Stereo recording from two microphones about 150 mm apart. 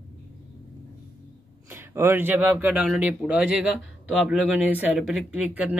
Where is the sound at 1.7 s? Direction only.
15° right (ahead or behind).